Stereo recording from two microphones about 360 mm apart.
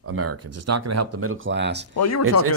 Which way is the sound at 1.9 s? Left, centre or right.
Left.